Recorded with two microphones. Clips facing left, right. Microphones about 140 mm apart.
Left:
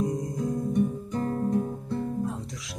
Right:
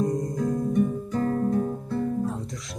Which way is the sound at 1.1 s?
25° left (ahead or behind).